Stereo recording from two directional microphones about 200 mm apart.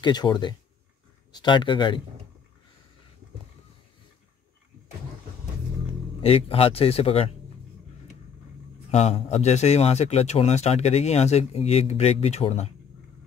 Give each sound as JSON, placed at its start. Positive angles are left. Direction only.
{"t": 0.0, "sound": "speech", "side_deg": 20}
{"t": 6.2, "sound": "speech", "side_deg": 30}
{"t": 8.9, "sound": "a man's voice", "side_deg": 30}